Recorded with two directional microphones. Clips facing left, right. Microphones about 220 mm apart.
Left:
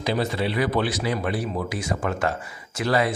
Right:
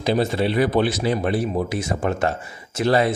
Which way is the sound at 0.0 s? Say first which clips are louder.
Right 4 dB; 25° right (ahead or behind).